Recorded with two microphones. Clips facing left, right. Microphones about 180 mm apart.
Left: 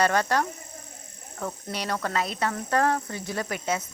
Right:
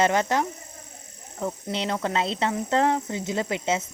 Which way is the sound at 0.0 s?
20° right (ahead or behind).